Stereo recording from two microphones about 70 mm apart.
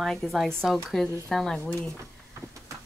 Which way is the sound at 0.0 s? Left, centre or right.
Centre.